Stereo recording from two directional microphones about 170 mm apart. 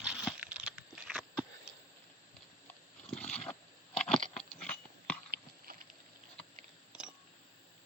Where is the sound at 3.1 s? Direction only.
5° left (ahead or behind).